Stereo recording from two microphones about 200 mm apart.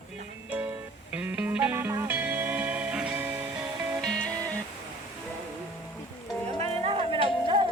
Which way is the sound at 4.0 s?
5° left (ahead or behind).